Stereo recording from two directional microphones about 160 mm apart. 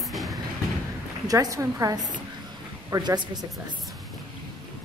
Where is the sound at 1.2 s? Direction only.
20° right (ahead or behind).